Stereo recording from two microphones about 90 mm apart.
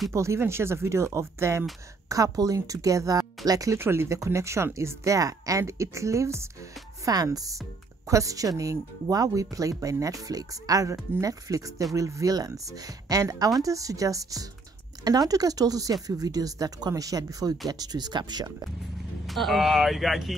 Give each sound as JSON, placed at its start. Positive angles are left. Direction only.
{"t": 0.1, "sound": "speech", "side_deg": -35}
{"t": 3.7, "sound": "speech", "side_deg": -30}
{"t": 7.1, "sound": "speech", "side_deg": -40}
{"t": 19.2, "sound": "speech", "side_deg": 0}